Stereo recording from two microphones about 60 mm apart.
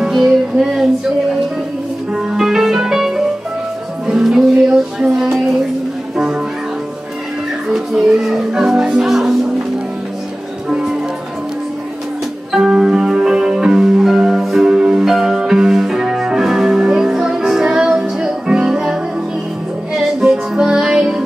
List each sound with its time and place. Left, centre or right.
0.1 s music: centre
2.1 s music: centre
5.1 s a sound: centre
7.7 s music: centre
10.7 s music: centre
12.5 s music: centre